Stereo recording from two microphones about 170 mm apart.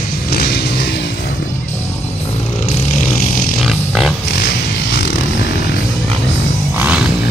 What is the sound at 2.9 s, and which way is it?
Vehicle, 55° left (ahead or behind).